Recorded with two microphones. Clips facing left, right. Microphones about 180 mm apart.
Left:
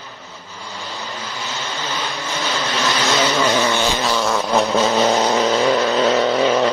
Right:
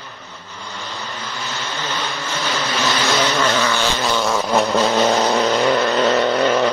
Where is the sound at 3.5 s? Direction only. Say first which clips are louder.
Left 1 dB; 15° left (ahead or behind).